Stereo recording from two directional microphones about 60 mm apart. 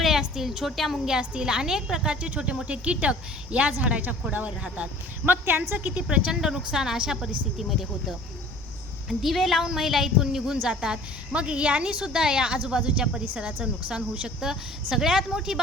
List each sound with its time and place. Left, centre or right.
0.0 s a woman's voice: centre